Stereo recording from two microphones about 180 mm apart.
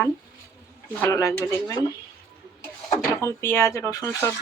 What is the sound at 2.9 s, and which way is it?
Speech, 15° left (ahead or behind).